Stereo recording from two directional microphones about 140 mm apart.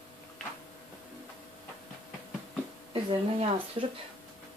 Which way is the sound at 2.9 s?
40° right (ahead or behind).